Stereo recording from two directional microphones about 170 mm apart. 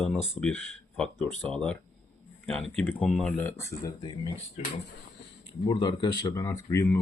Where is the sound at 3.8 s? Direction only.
25° left (ahead or behind).